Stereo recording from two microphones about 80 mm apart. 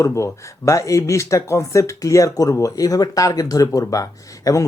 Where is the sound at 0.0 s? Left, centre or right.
Left.